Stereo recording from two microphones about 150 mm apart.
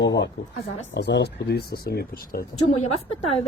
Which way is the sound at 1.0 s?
90° left.